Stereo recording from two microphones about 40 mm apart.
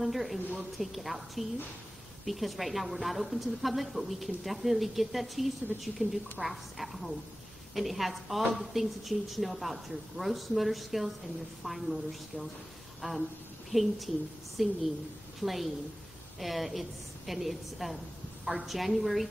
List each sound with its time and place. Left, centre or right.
0.0 s a woman's voice: centre
6.0 s a woman's voice: right
6.4 s a woman's voice: centre
13.0 s speech: centre
13.7 s a woman's voice: centre